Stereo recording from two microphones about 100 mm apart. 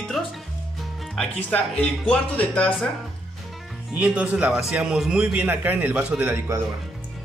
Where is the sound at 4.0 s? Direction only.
10° right (ahead or behind).